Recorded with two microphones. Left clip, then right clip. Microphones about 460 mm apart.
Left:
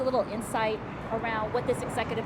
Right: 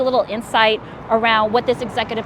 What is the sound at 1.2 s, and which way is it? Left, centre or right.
Speech, right.